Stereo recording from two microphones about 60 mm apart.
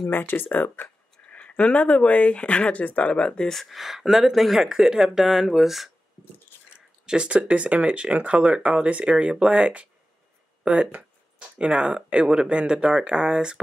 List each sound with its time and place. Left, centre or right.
0.1 s speech: left
1.3 s speech: left
3.7 s speech: centre
7.1 s speech: centre